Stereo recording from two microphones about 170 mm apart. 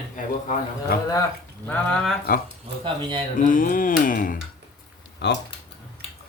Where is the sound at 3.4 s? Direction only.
50° left (ahead or behind).